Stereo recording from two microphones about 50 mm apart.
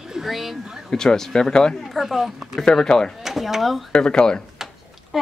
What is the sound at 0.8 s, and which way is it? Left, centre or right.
Speech, centre.